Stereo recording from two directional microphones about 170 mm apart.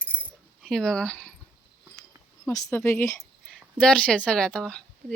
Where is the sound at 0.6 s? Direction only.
5° left (ahead or behind).